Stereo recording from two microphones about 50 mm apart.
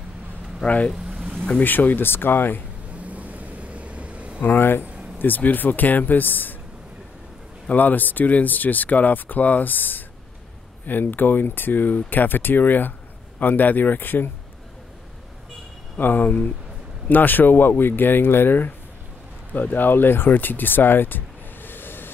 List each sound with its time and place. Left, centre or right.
0.6 s speech: centre
0.9 s vehicle: centre
1.6 s speech: left
3.0 s vehicle: right
4.4 s speech: left
7.7 s speech: left
16.0 s speech: left